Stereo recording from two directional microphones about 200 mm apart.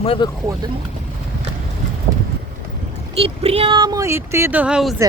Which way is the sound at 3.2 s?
30° right (ahead or behind).